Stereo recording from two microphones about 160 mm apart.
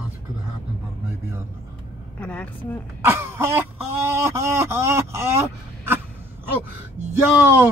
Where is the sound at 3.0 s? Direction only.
15° right (ahead or behind).